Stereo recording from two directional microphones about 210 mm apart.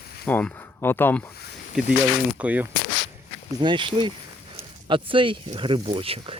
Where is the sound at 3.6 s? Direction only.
25° right (ahead or behind).